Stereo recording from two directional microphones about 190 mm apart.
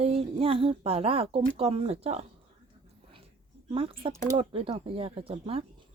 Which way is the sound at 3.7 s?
30° right (ahead or behind).